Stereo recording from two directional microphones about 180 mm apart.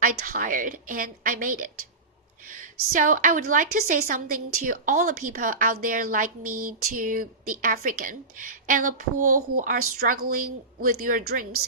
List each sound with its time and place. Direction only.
0.0 s a woman's voice: 50° right (ahead or behind)